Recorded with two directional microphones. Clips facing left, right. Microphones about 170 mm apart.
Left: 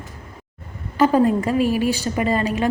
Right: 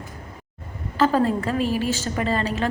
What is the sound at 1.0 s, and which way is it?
A woman's voice, 15° left (ahead or behind).